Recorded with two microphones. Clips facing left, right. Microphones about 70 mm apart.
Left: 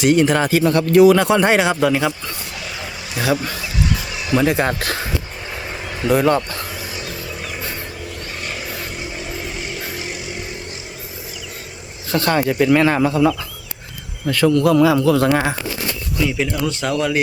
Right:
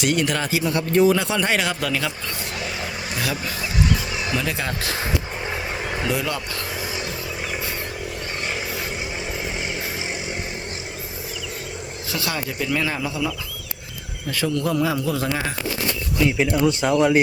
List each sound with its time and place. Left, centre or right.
0.0 s speech: left
1.2 s speech: left
4.4 s speech: left
6.1 s speech: left
12.1 s a man's voice: left
16.4 s speech: centre